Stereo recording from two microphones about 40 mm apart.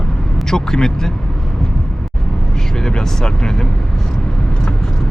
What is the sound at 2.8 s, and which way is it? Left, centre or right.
Speech, centre.